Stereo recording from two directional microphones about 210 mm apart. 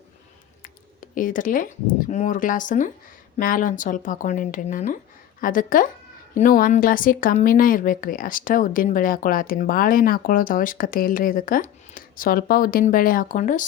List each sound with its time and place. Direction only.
1.1 s speech: 40° left (ahead or behind)